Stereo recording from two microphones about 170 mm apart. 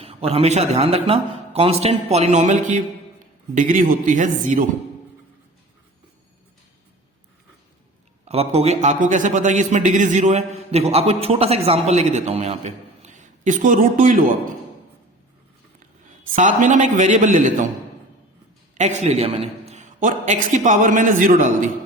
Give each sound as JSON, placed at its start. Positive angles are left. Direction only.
{"t": 0.0, "sound": "a man's voice", "side_deg": -35}
{"t": 8.2, "sound": "a man's voice", "side_deg": -40}
{"t": 16.3, "sound": "a man's voice", "side_deg": -50}
{"t": 18.8, "sound": "a man's voice", "side_deg": -45}